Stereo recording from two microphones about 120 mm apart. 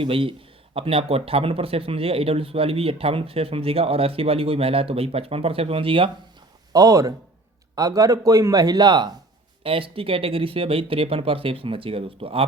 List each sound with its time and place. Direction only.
0.0 s speech: 50° right (ahead or behind)
6.7 s a man's voice: 30° right (ahead or behind)
9.6 s speech: 50° right (ahead or behind)